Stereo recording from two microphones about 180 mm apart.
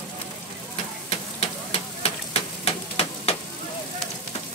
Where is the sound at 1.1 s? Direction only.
35° left (ahead or behind).